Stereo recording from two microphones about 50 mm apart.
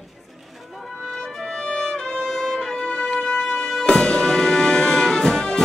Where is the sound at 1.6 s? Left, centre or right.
Centre.